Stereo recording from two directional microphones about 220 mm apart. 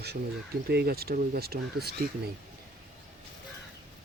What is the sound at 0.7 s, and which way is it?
Speech, 45° right (ahead or behind).